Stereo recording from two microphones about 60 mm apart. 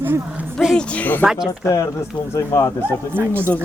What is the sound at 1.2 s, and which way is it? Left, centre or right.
Speech, centre.